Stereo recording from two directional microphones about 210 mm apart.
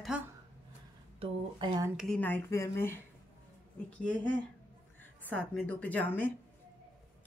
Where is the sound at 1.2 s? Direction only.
20° right (ahead or behind).